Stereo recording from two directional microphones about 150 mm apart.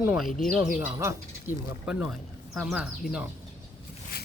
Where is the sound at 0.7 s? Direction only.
15° right (ahead or behind).